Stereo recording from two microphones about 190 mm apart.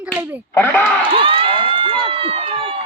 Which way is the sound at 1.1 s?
30° right (ahead or behind).